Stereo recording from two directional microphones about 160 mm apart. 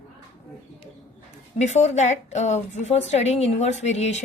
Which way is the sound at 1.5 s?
45° left (ahead or behind).